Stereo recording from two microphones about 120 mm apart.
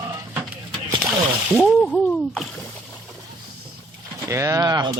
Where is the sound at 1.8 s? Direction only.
5° left (ahead or behind).